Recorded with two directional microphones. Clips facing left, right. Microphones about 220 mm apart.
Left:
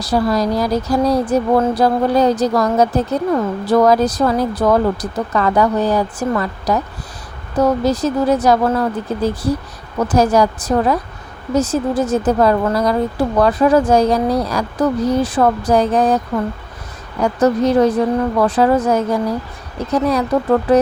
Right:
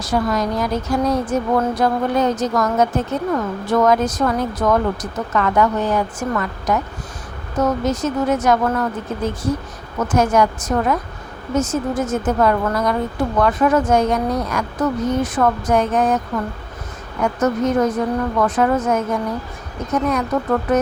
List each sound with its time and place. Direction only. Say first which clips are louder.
0.0 s speech: left 3 dB; 35° left (ahead or behind)